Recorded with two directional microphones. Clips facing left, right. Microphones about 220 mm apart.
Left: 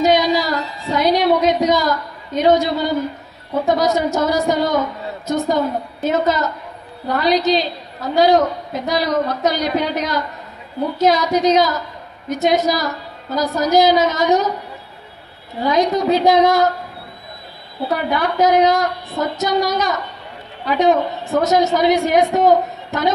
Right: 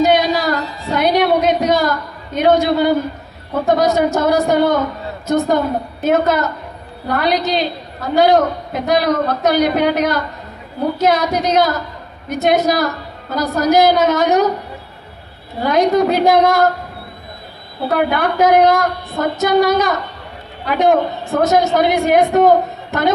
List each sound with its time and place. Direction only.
0.0 s a sound: 60° right (ahead or behind)
3.6 s a woman's voice: 55° right (ahead or behind)
15.6 s a woman's voice: 55° right (ahead or behind)
17.9 s a woman's voice: 55° right (ahead or behind)